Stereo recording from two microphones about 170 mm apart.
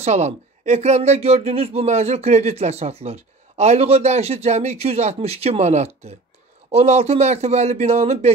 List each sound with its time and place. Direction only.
0.0 s speech: 40° right (ahead or behind)